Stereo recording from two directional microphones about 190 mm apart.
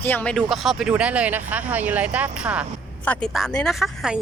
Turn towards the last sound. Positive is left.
turn(degrees=0)  # may be behind; listen again after turning